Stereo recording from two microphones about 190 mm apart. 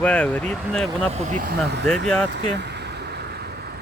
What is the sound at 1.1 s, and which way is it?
Speech, 40° right (ahead or behind).